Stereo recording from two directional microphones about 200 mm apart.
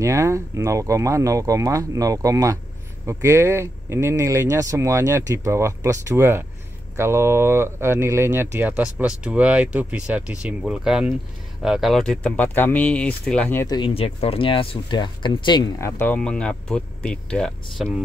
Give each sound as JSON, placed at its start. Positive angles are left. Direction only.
{"t": 0.0, "sound": "speech", "side_deg": -15}
{"t": 13.7, "sound": "speech", "side_deg": 25}